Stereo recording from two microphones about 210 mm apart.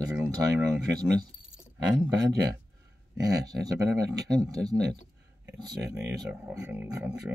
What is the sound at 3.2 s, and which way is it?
Speech, 20° right (ahead or behind).